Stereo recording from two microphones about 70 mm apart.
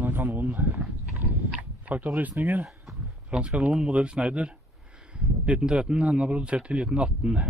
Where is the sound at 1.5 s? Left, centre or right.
Right.